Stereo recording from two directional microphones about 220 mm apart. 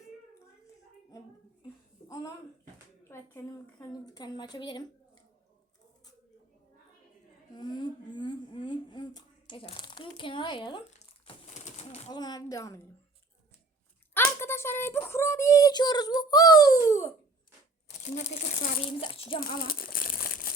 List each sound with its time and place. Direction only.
2.0 s speech: 15° left (ahead or behind)
3.3 s speech: 15° left (ahead or behind)
7.5 s speech: 20° left (ahead or behind)
11.3 s bird: 30° left (ahead or behind)
12.1 s speech: 20° left (ahead or behind)
14.1 s speech: 10° left (ahead or behind)
18.0 s speech: 35° left (ahead or behind)
19.4 s crumpling: 40° left (ahead or behind)